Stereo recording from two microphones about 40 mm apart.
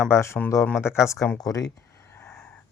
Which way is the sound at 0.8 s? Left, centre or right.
Left.